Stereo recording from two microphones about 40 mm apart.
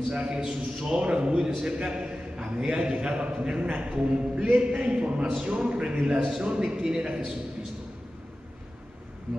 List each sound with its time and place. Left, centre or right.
0.1 s a man's voice: centre